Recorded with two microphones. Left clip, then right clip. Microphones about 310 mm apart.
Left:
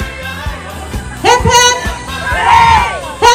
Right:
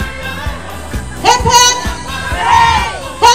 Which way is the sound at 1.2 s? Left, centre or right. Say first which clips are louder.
Even; right.